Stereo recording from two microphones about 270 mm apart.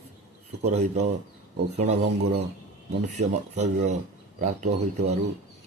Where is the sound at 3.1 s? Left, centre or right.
Right.